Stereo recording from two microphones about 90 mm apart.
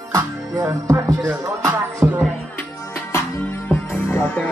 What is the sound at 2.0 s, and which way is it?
Music, 15° right (ahead or behind).